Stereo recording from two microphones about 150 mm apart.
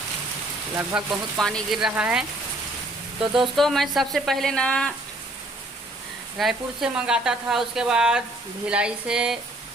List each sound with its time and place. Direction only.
0.9 s speech: 5° right (ahead or behind)
3.2 s speech: 35° right (ahead or behind)
3.5 s speech: centre (ahead or behind)
6.3 s speech: centre (ahead or behind)